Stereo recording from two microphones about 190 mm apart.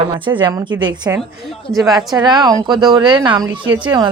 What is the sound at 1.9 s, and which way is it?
Speech, 20° right (ahead or behind).